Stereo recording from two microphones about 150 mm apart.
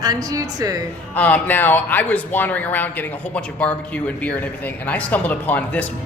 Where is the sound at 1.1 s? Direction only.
10° left (ahead or behind).